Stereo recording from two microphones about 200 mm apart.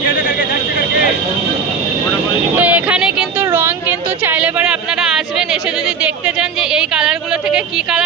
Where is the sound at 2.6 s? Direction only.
5° right (ahead or behind).